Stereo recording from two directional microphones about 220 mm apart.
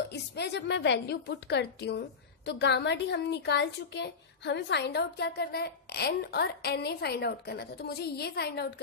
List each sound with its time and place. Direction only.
0.1 s a woman's voice: 50° left (ahead or behind)